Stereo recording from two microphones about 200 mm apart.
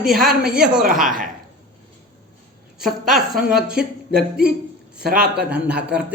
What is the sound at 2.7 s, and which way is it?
A woman's voice, centre (ahead or behind).